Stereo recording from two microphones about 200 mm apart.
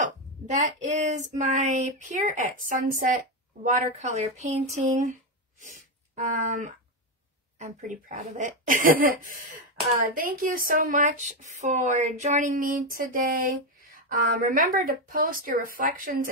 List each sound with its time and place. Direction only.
0.0 s female singing: 35° right (ahead or behind)
5.6 s speech: 40° right (ahead or behind)